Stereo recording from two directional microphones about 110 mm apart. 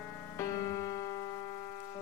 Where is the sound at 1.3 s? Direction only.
70° left (ahead or behind).